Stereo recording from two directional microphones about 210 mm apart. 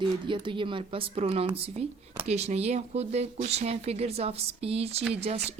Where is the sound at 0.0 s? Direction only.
25° right (ahead or behind).